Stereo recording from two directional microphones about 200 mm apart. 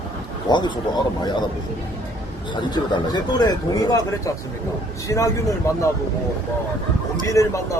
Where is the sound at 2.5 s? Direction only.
20° left (ahead or behind).